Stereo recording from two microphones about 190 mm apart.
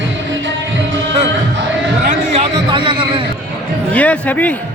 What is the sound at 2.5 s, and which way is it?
Speech, 25° right (ahead or behind).